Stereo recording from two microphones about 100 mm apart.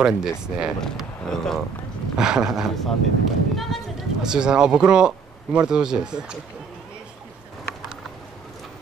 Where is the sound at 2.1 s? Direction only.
5° right (ahead or behind).